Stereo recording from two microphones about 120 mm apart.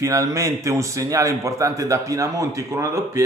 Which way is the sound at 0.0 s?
25° right (ahead or behind).